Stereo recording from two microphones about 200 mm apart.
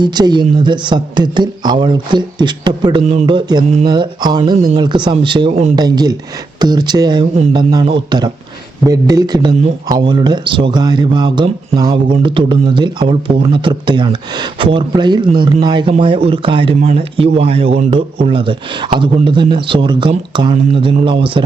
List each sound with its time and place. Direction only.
0.0 s speech: 20° right (ahead or behind)
5.8 s speech: 20° right (ahead or behind)